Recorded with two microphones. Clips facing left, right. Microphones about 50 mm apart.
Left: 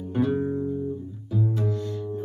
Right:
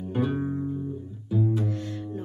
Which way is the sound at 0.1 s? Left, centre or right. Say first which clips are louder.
Left 3 dB; right.